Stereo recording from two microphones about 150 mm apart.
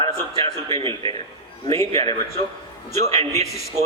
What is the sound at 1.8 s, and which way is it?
Speech, 20° left (ahead or behind).